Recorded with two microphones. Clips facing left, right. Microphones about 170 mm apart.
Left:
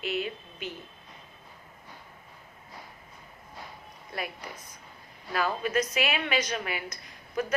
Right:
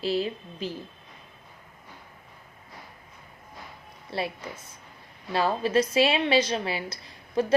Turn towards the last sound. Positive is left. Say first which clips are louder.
# right 5 dB
turn(degrees=-30)  # may be behind; listen again after turning